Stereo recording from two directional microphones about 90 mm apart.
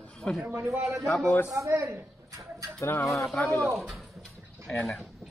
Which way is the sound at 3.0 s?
Centre (ahead or behind).